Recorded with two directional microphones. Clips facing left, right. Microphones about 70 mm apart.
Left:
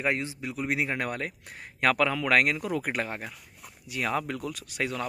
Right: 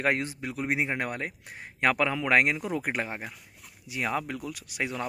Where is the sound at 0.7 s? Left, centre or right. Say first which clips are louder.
Even; centre.